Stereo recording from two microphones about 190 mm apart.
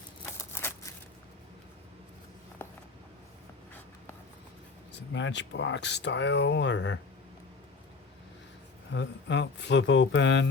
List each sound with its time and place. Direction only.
0.5 s a sound: 15° left (ahead or behind)
5.1 s speech: 70° left (ahead or behind)
8.9 s speech: 70° left (ahead or behind)